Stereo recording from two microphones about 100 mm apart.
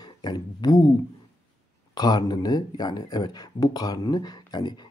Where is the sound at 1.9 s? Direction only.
45° left (ahead or behind).